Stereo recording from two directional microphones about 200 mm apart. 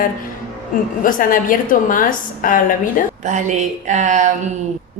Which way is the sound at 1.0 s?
45° left (ahead or behind).